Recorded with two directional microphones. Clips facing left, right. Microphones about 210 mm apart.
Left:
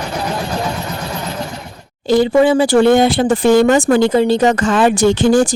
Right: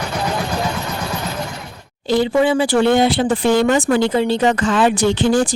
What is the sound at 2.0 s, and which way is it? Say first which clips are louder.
Speech: left 4 dB; 45° left (ahead or behind).